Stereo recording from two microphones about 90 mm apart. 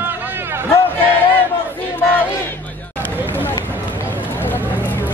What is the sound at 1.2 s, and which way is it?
Crowd, 20° left (ahead or behind).